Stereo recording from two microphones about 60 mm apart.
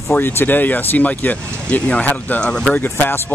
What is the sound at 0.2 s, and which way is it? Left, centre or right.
Speech, left.